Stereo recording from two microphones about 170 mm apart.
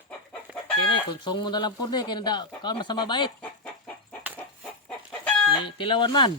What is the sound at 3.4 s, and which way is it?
Chicken, 5° left (ahead or behind).